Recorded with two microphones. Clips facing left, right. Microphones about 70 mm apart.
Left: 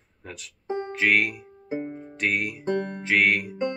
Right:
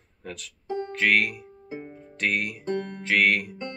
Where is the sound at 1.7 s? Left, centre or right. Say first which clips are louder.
Left 7 dB; left.